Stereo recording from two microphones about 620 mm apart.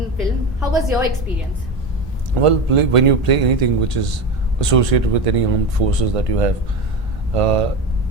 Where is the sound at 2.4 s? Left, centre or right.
Right.